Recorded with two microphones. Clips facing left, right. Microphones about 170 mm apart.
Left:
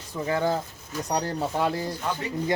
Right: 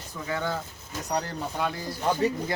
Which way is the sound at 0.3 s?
35° left (ahead or behind).